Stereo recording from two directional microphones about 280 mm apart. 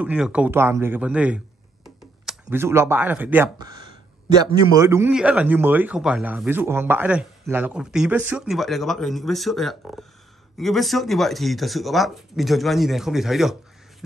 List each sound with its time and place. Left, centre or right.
0.0 s a man's voice: centre